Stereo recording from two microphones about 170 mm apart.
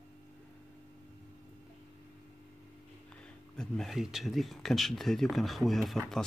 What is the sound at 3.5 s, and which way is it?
Speech, 5° left (ahead or behind).